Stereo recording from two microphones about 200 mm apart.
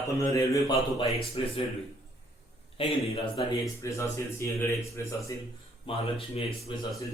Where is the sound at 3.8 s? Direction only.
15° left (ahead or behind).